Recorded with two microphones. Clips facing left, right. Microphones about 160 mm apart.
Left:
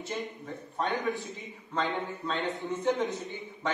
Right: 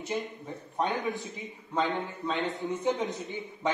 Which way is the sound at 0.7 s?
20° right (ahead or behind).